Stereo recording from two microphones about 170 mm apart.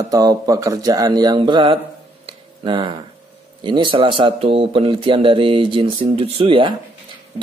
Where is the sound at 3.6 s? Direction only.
30° right (ahead or behind).